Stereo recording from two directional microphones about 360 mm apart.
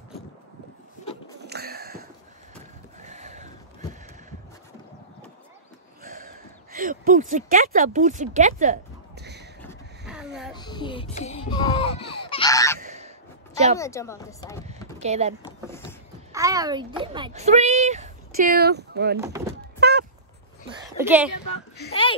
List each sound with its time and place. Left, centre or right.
1.4 s a sound: right
6.0 s speech: right
9.2 s a sound: right
9.6 s vehicle: centre
10.5 s music: centre
11.5 s honk: centre
12.8 s goose: centre
13.7 s speech: centre
15.0 s a child's voice: centre
19.1 s speech: centre
19.8 s vehicle: right
21.0 s speech: centre